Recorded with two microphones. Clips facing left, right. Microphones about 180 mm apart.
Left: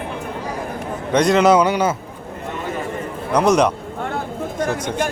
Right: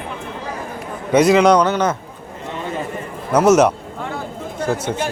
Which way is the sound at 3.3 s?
5° right (ahead or behind).